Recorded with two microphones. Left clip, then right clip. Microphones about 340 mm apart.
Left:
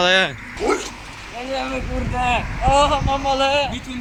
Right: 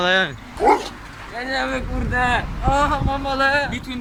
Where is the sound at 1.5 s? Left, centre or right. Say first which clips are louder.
Right 1 dB; centre.